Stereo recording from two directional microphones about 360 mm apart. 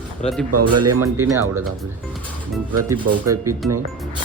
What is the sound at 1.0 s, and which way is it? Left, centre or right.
Speech, centre.